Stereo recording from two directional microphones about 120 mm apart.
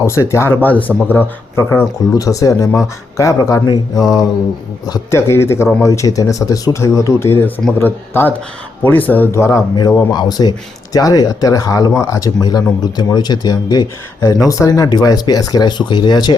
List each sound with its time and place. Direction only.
0.0 s speech: 25° left (ahead or behind)
10.1 s speech: 35° left (ahead or behind)